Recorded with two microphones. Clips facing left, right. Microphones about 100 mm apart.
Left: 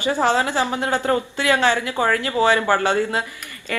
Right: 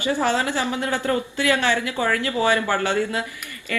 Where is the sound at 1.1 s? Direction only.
40° left (ahead or behind).